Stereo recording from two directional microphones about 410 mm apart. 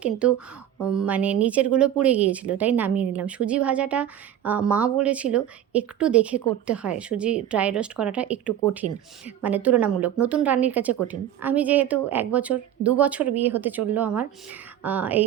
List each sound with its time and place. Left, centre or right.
0.0 s speech: centre